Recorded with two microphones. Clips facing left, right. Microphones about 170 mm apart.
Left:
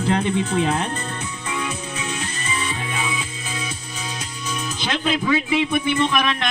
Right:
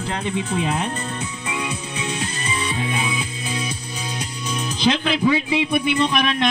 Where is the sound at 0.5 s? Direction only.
15° right (ahead or behind).